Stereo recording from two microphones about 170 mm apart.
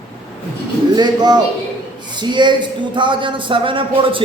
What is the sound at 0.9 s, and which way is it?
A man's voice, 25° right (ahead or behind).